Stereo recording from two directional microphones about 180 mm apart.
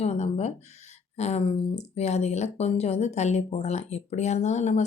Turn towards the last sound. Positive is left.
turn(degrees=40)  # may be behind; listen again after turning